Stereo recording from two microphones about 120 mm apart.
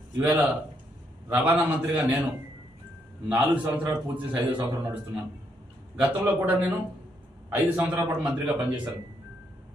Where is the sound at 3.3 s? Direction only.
15° right (ahead or behind).